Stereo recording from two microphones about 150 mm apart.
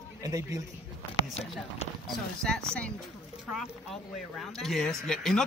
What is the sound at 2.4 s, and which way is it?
Speech, 5° left (ahead or behind).